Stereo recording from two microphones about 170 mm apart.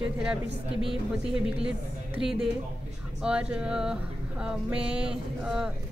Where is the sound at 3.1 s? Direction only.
5° right (ahead or behind).